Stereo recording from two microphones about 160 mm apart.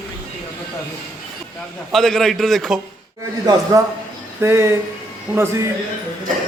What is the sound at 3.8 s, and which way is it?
A man's voice, 20° right (ahead or behind).